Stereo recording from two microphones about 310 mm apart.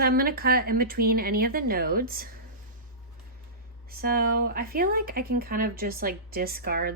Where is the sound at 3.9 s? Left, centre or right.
Right.